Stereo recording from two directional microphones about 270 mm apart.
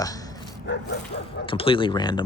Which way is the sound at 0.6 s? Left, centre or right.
Left.